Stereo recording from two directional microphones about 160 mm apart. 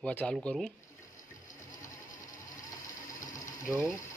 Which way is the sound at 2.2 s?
20° left (ahead or behind).